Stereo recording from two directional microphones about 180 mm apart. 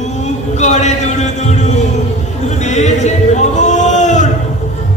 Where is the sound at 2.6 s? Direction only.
40° left (ahead or behind).